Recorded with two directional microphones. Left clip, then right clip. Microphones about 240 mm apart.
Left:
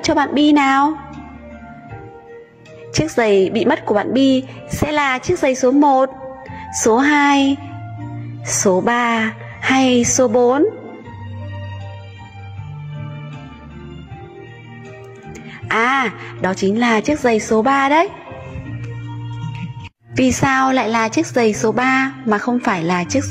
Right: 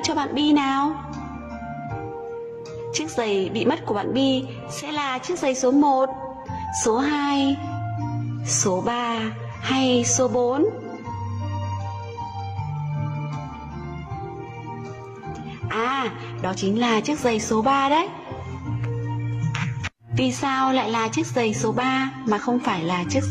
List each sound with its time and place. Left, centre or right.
0.0 s a woman's voice: centre
2.9 s a woman's voice: left
8.6 s a woman's voice: centre
15.7 s a woman's voice: left
20.2 s a woman's voice: centre